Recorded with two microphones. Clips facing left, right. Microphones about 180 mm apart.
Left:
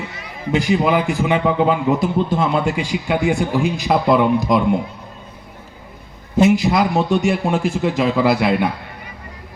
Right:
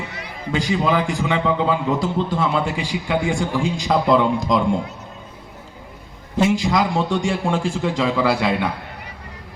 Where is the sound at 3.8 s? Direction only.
10° left (ahead or behind).